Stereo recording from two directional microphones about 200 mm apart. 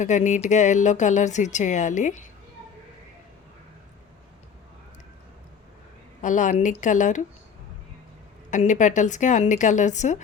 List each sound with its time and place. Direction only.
0.0 s speech: 35° left (ahead or behind)
6.2 s speech: 40° left (ahead or behind)
8.4 s speech: 40° left (ahead or behind)